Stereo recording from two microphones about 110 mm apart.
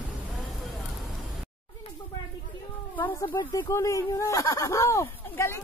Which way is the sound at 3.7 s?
30° left (ahead or behind).